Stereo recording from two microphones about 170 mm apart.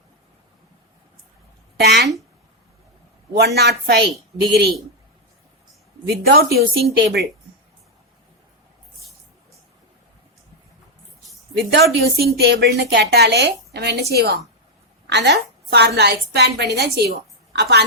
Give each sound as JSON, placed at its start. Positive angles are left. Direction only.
{"t": 1.7, "sound": "speech", "side_deg": -80}
{"t": 3.3, "sound": "a woman's voice", "side_deg": -75}
{"t": 6.2, "sound": "speech", "side_deg": -65}
{"t": 11.5, "sound": "a woman's voice", "side_deg": -75}
{"t": 15.1, "sound": "a woman's voice", "side_deg": -90}